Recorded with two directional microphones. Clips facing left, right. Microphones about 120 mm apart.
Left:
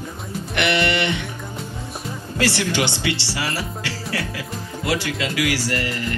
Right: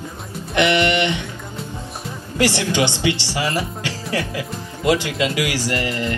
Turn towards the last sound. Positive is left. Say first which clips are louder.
# right 2 dB
turn(degrees=-20)  # may be behind; listen again after turning